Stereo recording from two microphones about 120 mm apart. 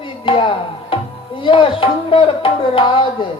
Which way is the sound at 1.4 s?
45° left (ahead or behind).